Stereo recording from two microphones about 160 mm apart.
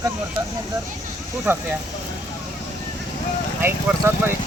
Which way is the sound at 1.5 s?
15° right (ahead or behind).